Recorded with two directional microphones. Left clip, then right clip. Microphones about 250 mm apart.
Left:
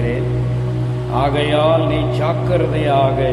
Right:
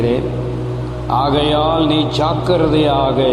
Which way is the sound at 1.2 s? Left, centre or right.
Right.